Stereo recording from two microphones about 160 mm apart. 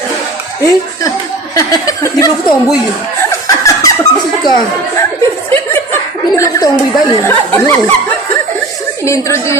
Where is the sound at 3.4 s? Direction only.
20° left (ahead or behind).